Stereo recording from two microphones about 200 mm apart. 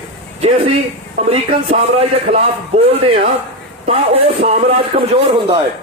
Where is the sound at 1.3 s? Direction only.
30° right (ahead or behind).